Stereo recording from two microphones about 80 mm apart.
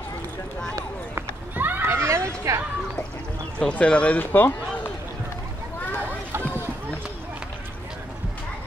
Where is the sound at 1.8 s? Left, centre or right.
Right.